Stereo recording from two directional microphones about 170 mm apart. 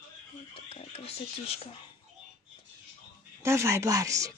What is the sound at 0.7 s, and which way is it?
Speech, 35° left (ahead or behind).